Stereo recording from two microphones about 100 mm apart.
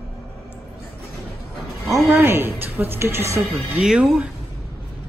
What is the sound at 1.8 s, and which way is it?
A woman's voice, 25° right (ahead or behind).